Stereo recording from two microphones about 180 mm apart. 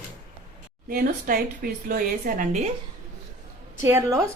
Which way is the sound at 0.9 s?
55° right (ahead or behind).